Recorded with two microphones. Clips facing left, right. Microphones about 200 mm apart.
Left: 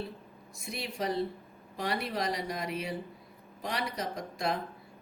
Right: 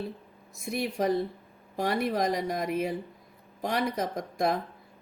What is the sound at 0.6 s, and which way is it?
Speech, 50° right (ahead or behind).